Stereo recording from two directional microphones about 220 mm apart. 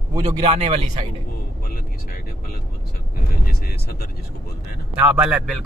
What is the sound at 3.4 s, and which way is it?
Speech, 45° left (ahead or behind).